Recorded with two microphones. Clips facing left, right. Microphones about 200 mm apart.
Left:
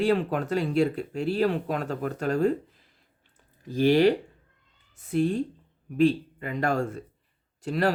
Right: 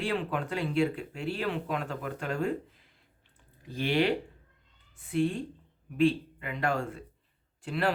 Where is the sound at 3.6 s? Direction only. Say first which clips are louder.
Left 7 dB; 40° left (ahead or behind).